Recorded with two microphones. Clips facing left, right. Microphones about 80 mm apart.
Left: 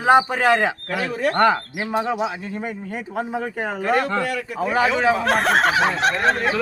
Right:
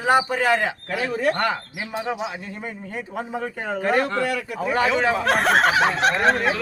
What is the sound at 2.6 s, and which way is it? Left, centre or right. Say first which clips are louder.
Speech: left 3 dB; centre.